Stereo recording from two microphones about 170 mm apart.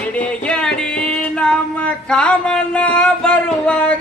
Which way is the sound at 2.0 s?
5° left (ahead or behind).